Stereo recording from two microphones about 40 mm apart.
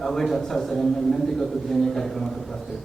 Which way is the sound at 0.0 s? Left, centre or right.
Centre.